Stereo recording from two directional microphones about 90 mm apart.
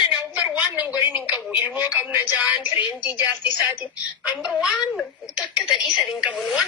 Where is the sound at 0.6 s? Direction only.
15° right (ahead or behind).